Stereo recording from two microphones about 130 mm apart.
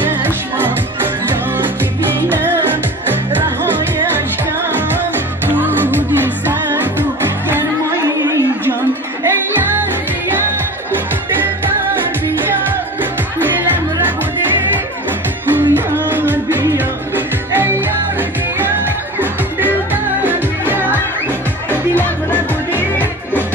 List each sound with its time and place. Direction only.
0.0 s music: 15° right (ahead or behind)
5.5 s music: 15° right (ahead or behind)
9.2 s music: 15° right (ahead or behind)
15.5 s music: 15° right (ahead or behind)
19.1 s music: 15° right (ahead or behind)
21.6 s music: 15° left (ahead or behind)